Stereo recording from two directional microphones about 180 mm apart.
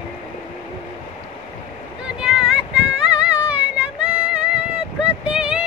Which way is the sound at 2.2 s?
5° right (ahead or behind).